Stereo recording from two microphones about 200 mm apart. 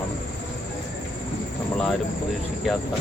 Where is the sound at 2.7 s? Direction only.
Centre (ahead or behind).